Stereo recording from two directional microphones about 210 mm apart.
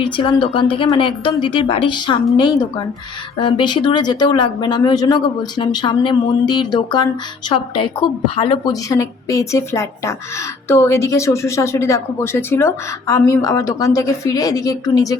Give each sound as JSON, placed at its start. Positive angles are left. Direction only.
{"t": 0.0, "sound": "a woman's voice", "side_deg": 25}